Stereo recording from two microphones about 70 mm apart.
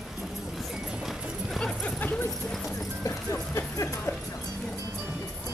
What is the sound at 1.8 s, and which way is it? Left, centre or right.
Dog, left.